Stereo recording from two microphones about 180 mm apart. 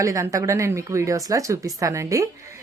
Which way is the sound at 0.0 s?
15° right (ahead or behind).